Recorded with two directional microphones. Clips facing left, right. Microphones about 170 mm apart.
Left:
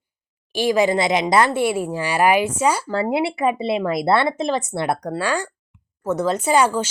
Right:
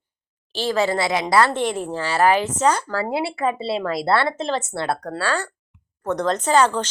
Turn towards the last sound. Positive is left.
turn(degrees=10)  # may be behind; listen again after turning